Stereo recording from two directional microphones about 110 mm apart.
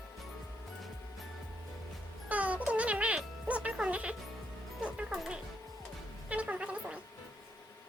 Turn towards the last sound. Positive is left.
turn(degrees=-10)  # may be behind; listen again after turning